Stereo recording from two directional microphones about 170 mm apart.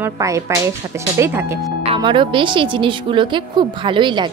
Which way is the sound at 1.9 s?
30° right (ahead or behind).